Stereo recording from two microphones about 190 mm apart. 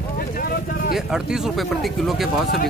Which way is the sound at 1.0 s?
5° right (ahead or behind).